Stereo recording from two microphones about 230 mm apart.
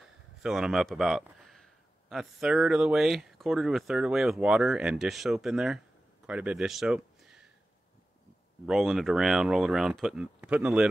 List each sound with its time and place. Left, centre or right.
0.0 s a man's voice: centre
8.6 s speech: centre